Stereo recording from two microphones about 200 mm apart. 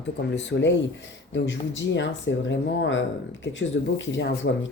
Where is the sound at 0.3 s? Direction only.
65° left (ahead or behind).